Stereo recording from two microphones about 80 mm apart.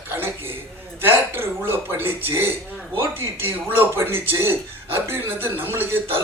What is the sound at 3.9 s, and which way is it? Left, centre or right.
Speech, right.